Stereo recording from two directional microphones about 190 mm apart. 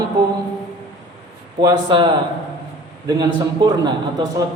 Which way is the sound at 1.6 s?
25° right (ahead or behind).